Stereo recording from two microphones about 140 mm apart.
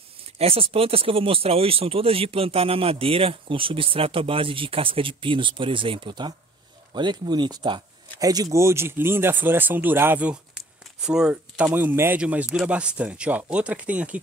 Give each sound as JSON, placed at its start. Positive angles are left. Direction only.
{"t": 0.4, "sound": "speech", "side_deg": -45}